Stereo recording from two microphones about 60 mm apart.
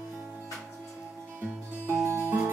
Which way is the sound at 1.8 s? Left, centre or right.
Right.